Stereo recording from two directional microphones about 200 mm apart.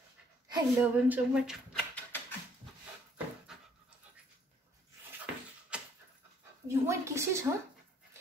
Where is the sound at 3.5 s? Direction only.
Centre (ahead or behind).